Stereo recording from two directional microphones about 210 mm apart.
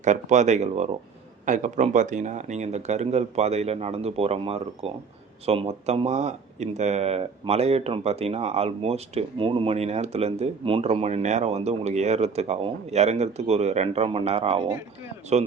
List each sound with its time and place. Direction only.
0.0 s speech: 35° right (ahead or behind)